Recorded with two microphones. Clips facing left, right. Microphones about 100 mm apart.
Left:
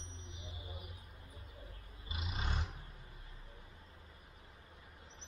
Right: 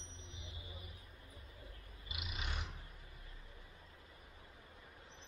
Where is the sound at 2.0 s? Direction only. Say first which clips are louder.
Left 4 dB; 30° left (ahead or behind).